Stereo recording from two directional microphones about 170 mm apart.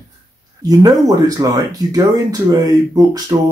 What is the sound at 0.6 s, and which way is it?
Speech, 20° right (ahead or behind).